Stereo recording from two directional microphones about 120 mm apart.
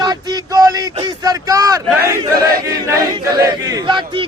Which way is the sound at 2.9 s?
30° right (ahead or behind).